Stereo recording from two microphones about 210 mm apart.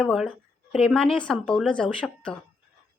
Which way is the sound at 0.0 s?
Centre (ahead or behind).